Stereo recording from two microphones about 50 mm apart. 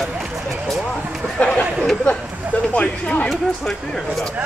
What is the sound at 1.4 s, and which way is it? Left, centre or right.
Speech, centre.